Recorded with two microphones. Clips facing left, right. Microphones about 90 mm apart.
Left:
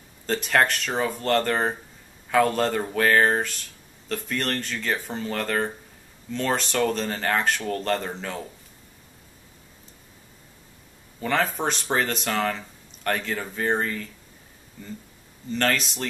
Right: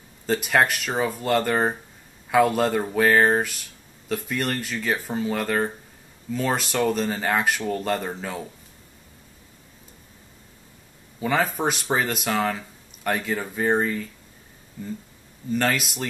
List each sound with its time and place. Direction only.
0.3 s speech: 5° right (ahead or behind)
11.1 s speech: 5° right (ahead or behind)
15.5 s speech: 5° right (ahead or behind)